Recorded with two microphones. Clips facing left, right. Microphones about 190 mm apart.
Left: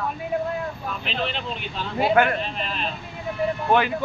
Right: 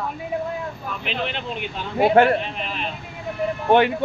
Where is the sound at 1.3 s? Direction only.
60° right (ahead or behind).